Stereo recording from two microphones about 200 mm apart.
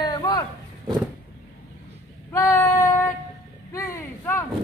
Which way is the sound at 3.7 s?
15° left (ahead or behind).